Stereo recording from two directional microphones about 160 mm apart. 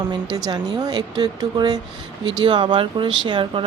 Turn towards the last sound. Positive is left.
turn(degrees=-30)  # may be behind; listen again after turning